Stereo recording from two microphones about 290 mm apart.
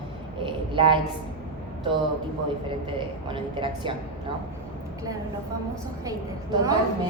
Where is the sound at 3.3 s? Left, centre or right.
Centre.